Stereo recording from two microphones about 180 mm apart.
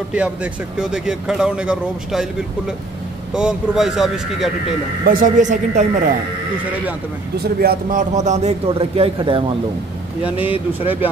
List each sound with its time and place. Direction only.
0.1 s speech: 5° right (ahead or behind)
3.3 s speech: 5° right (ahead or behind)
5.0 s speech: 50° right (ahead or behind)
7.4 s a man's voice: 50° right (ahead or behind); by 9.4 s 30° right (ahead or behind)
10.2 s speech: 10° right (ahead or behind)